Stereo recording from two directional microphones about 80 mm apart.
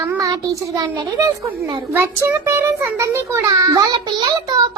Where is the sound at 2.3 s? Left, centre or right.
Right.